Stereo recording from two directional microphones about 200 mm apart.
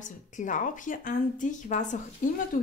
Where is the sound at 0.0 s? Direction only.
40° left (ahead or behind).